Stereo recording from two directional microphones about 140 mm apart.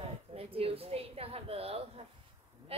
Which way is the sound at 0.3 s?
45° right (ahead or behind).